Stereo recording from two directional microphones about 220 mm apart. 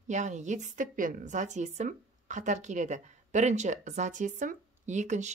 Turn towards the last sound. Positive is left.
turn(degrees=-30)  # may be behind; listen again after turning